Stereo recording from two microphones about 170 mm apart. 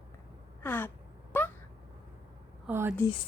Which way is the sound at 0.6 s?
10° left (ahead or behind).